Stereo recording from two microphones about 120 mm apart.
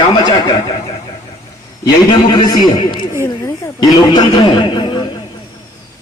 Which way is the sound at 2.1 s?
40° left (ahead or behind).